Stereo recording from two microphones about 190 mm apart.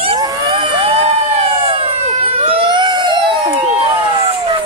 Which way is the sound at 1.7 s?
30° right (ahead or behind).